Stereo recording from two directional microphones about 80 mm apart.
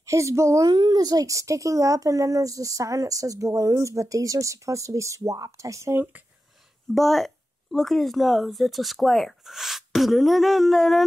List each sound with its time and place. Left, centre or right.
0.0 s a woman's voice: right
0.7 s speech: right
6.9 s speech: centre